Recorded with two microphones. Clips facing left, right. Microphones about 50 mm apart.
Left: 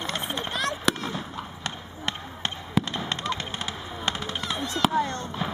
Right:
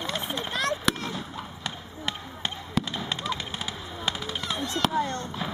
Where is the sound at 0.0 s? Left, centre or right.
Centre.